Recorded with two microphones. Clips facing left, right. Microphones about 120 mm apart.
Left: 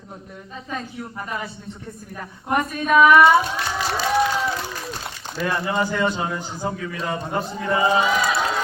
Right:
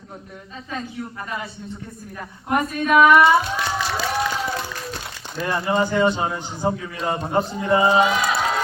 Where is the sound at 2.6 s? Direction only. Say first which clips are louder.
Even; centre (ahead or behind).